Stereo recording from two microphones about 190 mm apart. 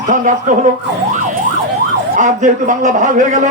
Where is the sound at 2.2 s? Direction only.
40° right (ahead or behind).